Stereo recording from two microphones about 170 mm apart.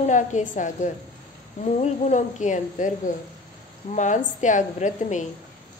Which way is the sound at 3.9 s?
45° left (ahead or behind).